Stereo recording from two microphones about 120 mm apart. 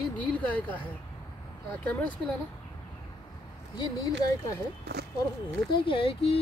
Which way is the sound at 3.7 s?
35° left (ahead or behind).